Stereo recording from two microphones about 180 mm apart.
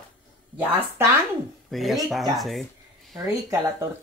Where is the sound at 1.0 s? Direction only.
15° right (ahead or behind).